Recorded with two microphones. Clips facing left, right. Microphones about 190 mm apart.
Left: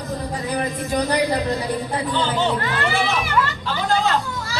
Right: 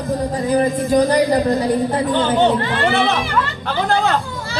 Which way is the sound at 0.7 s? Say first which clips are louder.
Right 7 dB; 45° right (ahead or behind).